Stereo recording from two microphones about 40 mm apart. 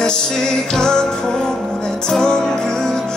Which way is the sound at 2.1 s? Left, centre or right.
Centre.